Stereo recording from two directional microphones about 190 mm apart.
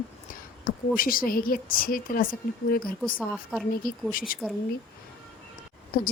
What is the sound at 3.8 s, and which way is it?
Speech, 50° left (ahead or behind).